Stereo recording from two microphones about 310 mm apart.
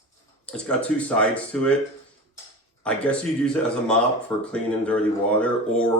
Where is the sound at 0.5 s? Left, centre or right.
Centre.